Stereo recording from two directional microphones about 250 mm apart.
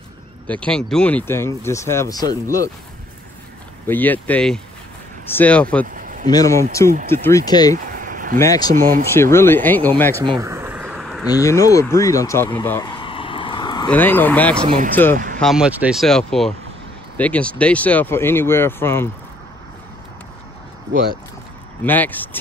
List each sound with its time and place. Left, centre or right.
0.5 s speech: centre
3.8 s speech: centre
5.9 s a sound: right
6.2 s speech: centre
7.7 s a sound: right
8.4 s speech: centre
8.7 s speech: right
9.1 s speech: centre
10.4 s a sound: centre
11.2 s speech: centre
13.8 s speech: centre
15.1 s speech: right
15.4 s speech: centre
21.8 s speech: centre